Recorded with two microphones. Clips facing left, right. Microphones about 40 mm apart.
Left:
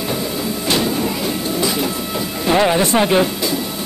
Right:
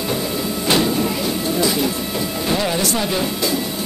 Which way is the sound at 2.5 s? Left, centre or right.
Left.